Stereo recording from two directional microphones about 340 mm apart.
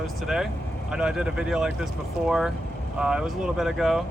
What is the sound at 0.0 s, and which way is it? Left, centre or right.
Speech, centre.